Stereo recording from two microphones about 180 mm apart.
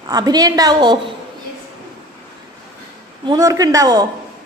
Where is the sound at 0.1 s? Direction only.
20° right (ahead or behind).